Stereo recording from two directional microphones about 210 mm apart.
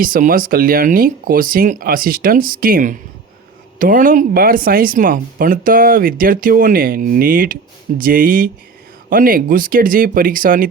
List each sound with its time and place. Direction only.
0.0 s speech: 40° right (ahead or behind)